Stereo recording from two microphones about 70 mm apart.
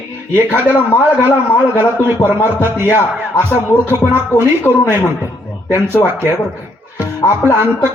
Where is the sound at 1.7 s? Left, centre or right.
Right.